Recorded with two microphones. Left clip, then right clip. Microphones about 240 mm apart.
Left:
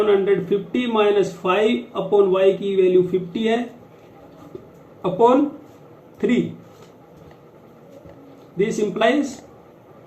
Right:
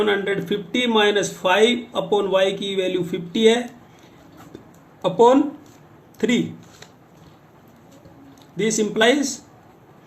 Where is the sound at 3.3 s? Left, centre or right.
Right.